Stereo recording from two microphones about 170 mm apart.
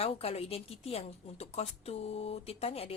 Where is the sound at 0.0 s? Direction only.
35° left (ahead or behind).